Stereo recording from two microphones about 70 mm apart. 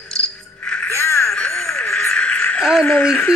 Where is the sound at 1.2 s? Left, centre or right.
Centre.